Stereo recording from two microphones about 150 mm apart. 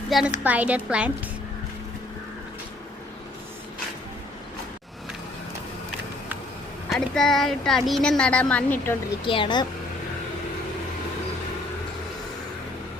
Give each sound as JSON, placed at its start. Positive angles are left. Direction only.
{"t": 0.1, "sound": "a woman's voice", "side_deg": -5}
{"t": 6.9, "sound": "a woman's voice", "side_deg": 5}
{"t": 9.2, "sound": "speech", "side_deg": 35}